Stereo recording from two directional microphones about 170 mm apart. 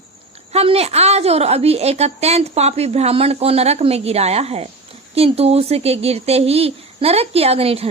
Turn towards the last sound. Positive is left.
turn(degrees=-35)  # may be behind; listen again after turning